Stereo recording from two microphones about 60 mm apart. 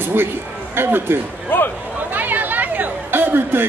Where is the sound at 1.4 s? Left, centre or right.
Left.